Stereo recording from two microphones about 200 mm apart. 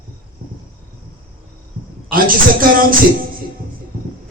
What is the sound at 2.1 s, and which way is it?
Speech, 45° right (ahead or behind).